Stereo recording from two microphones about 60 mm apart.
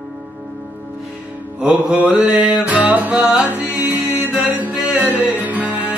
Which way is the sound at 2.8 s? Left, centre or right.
Right.